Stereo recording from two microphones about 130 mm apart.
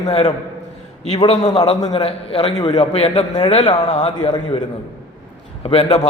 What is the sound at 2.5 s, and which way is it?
Speech, 35° left (ahead or behind).